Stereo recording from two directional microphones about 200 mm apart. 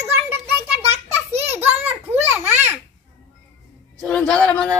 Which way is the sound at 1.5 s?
10° right (ahead or behind).